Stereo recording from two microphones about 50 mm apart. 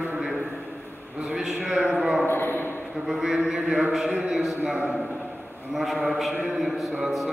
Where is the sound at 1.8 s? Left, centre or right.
Right.